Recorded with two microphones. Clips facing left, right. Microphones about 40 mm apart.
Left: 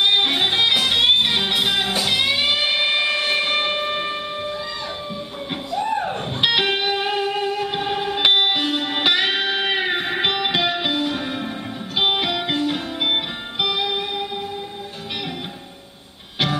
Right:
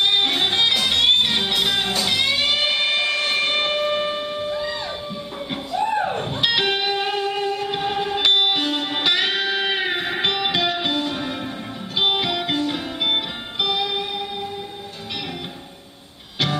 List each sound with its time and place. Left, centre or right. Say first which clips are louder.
0.0 s music: left 1 dB; centre
5.5 s a sound: right 1 dB; centre
6.4 s music: left 2 dB; centre
8.2 s music: left 1 dB; centre
8.5 s music: left 1 dB; centre